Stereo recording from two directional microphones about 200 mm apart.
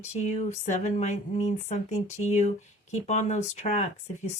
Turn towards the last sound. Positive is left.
turn(degrees=35)  # may be behind; listen again after turning